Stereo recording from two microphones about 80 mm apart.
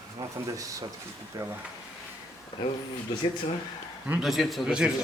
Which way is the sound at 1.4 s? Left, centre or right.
Right.